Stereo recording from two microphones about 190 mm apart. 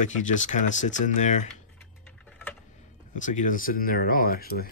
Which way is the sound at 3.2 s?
40° left (ahead or behind).